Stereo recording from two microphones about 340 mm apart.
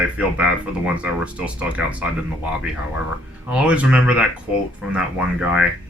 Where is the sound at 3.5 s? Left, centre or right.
Centre.